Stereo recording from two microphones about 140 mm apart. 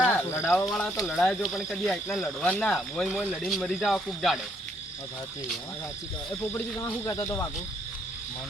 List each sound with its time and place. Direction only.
0.0 s cricket: 10° left (ahead or behind)
0.6 s speech: 5° left (ahead or behind)
6.5 s speech: 20° left (ahead or behind)